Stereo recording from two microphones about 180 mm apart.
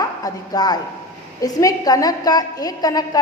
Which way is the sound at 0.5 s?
20° left (ahead or behind).